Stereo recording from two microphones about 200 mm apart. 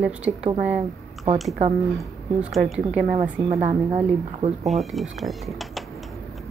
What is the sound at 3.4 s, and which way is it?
A woman's voice, 35° right (ahead or behind).